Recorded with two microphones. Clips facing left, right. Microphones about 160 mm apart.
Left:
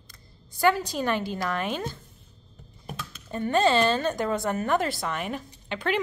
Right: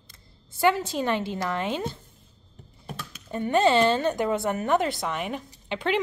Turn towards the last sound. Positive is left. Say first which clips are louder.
# right 2 dB
turn(degrees=-20)  # may be behind; listen again after turning